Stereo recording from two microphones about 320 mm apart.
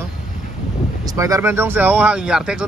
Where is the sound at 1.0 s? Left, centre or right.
Centre.